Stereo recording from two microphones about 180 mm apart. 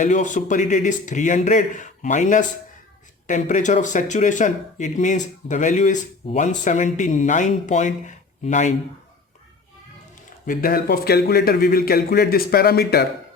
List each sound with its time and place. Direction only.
0.0 s speech: 45° left (ahead or behind)
10.4 s a man's voice: 50° left (ahead or behind)